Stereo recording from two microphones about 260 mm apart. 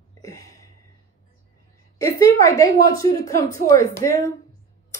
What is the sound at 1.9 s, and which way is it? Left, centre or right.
A woman's voice, centre.